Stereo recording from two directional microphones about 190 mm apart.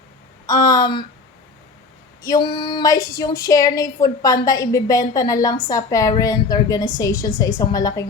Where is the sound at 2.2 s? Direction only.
20° left (ahead or behind).